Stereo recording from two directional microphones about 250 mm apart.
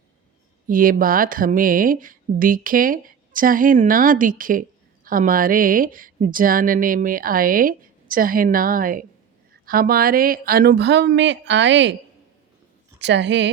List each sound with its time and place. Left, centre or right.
0.7 s a woman's voice: right
13.0 s a woman's voice: right